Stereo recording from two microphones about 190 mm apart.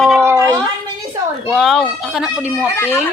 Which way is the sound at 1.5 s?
Centre (ahead or behind).